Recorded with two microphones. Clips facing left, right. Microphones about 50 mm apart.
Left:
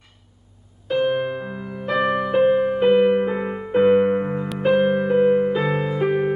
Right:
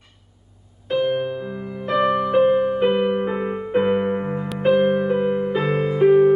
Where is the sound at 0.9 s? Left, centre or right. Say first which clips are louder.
Even; centre.